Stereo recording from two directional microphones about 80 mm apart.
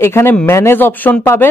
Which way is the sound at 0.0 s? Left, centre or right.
Left.